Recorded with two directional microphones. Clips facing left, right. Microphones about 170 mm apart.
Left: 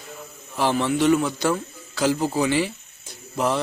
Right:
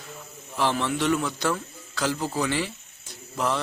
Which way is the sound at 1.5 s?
10° left (ahead or behind).